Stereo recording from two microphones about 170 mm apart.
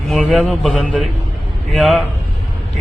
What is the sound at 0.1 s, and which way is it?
Speech, centre (ahead or behind).